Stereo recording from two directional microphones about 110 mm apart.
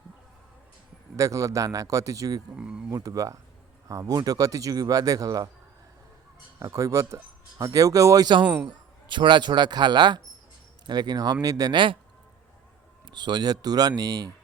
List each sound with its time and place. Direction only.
1.1 s speech: 30° right (ahead or behind)
2.6 s a sound: 10° right (ahead or behind)
2.9 s speech: 35° right (ahead or behind)
6.6 s speech: 30° right (ahead or behind); by 11.9 s 45° right (ahead or behind)
13.1 s speech: 40° right (ahead or behind)